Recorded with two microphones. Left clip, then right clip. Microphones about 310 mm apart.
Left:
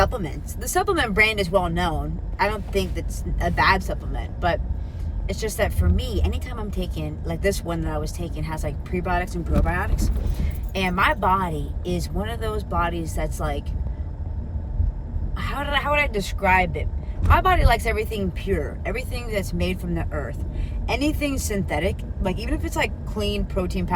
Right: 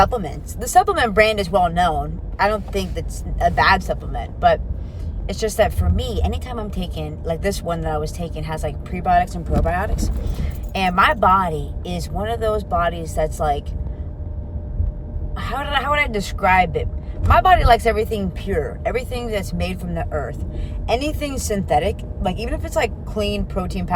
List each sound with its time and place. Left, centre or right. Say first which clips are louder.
0.1 s speech: right 6 dB; centre
15.4 s speech: right 3 dB; centre